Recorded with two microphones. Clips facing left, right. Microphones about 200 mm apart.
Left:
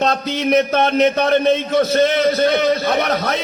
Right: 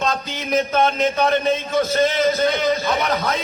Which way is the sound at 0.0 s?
70° left (ahead or behind).